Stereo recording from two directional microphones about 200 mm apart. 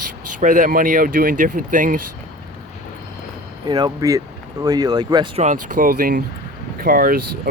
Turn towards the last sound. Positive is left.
turn(degrees=-45)  # may be behind; listen again after turning